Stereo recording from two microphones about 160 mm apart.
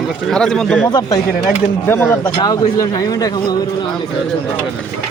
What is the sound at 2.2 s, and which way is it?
Speech, 25° left (ahead or behind).